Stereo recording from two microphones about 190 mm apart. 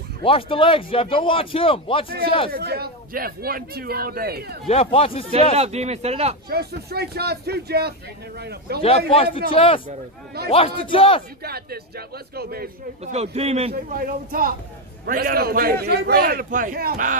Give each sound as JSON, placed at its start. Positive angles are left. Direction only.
{"t": 0.2, "sound": "a man's voice", "side_deg": 30}
{"t": 2.5, "sound": "a man's voice", "side_deg": -55}
{"t": 4.6, "sound": "a man's voice", "side_deg": 30}
{"t": 5.3, "sound": "a man's voice", "side_deg": -35}
{"t": 6.5, "sound": "speech", "side_deg": -55}
{"t": 8.8, "sound": "a man's voice", "side_deg": 30}
{"t": 11.4, "sound": "a man's voice", "side_deg": -55}
{"t": 13.0, "sound": "a man's voice", "side_deg": -35}
{"t": 13.9, "sound": "a man's voice", "side_deg": -50}